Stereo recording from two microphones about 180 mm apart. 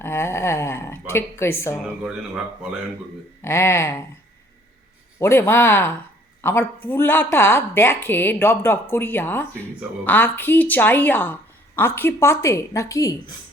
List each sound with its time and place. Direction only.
0.0 s speech: 15° left (ahead or behind)
1.7 s speech: 5° right (ahead or behind)
3.4 s speech: 15° left (ahead or behind)
5.2 s speech: 15° left (ahead or behind)